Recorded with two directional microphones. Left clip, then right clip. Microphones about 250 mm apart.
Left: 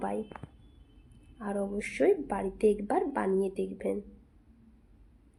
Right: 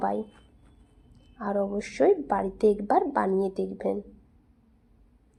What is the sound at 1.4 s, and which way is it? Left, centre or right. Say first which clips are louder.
A woman's voice: right 6 dB; centre.